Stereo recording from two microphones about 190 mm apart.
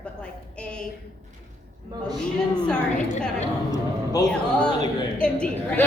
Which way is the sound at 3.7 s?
20° left (ahead or behind).